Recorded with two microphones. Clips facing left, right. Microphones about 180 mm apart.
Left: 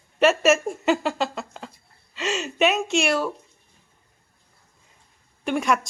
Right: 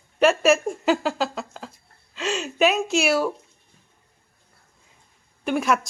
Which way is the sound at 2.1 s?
Centre (ahead or behind).